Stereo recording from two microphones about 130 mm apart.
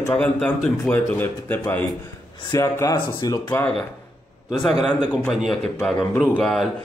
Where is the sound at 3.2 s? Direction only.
30° left (ahead or behind).